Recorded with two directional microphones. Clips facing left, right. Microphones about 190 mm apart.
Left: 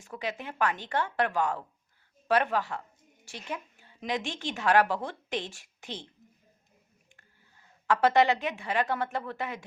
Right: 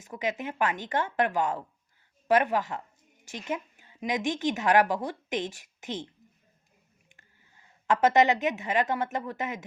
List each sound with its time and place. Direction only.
0.0 s a woman's voice: 15° right (ahead or behind)
7.2 s a woman's voice: 20° right (ahead or behind)